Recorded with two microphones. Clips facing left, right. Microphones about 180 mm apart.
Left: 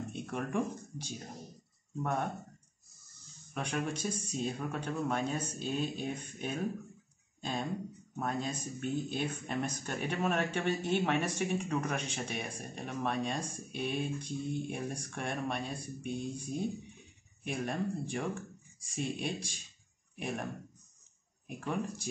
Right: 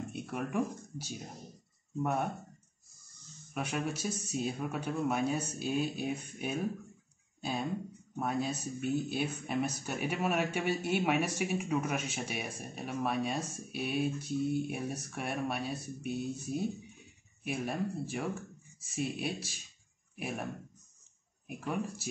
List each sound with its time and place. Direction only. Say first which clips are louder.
0.1 s speech: even; 5° right (ahead or behind)
3.5 s speech: even; 10° right (ahead or behind)
8.2 s speech: right 2 dB; 10° right (ahead or behind)
21.5 s speech: even; 5° right (ahead or behind)